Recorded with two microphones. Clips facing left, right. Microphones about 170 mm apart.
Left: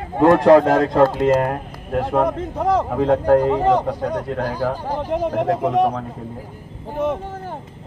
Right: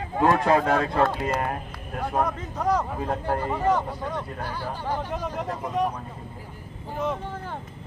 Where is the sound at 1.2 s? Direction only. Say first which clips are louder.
Left 10 dB; 60° left (ahead or behind).